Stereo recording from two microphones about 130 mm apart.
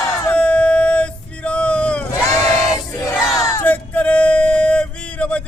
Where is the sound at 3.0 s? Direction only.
25° left (ahead or behind).